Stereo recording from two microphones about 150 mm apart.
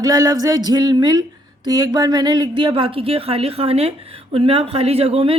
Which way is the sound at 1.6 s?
25° right (ahead or behind).